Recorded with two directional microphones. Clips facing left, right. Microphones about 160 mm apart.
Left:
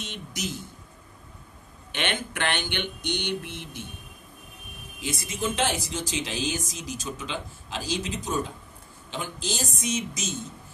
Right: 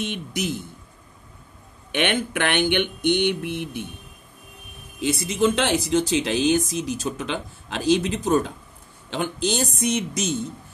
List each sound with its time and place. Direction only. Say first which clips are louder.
0.0 s speech: right 7 dB; 55° right (ahead or behind)
1.9 s speech: right 7 dB; 60° right (ahead or behind)
5.0 s speech: right 9 dB; 70° right (ahead or behind)